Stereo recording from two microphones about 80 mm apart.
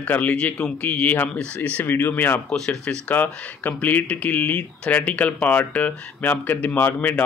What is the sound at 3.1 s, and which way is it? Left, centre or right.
Speech, left.